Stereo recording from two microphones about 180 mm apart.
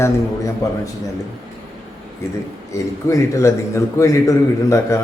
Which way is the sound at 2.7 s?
15° left (ahead or behind).